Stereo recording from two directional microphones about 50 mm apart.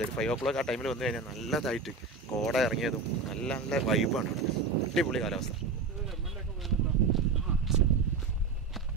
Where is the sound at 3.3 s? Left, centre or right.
Centre.